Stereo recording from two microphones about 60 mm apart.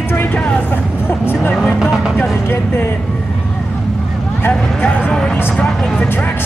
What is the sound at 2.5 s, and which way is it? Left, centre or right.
Speech, left.